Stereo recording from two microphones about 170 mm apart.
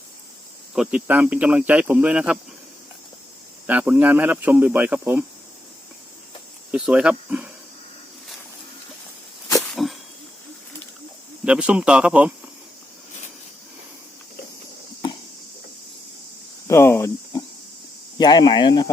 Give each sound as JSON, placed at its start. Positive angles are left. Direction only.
{"t": 0.7, "sound": "speech", "side_deg": -5}
{"t": 3.7, "sound": "speech", "side_deg": -10}
{"t": 6.7, "sound": "speech", "side_deg": -5}
{"t": 9.6, "sound": "a sound", "side_deg": 0}
{"t": 11.4, "sound": "speech", "side_deg": -5}
{"t": 16.6, "sound": "a sound", "side_deg": 15}
{"t": 18.2, "sound": "speech", "side_deg": 25}